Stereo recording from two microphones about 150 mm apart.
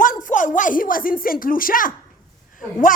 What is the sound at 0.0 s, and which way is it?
Speech, 60° left (ahead or behind).